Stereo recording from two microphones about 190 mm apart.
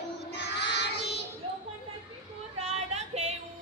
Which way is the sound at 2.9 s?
35° right (ahead or behind).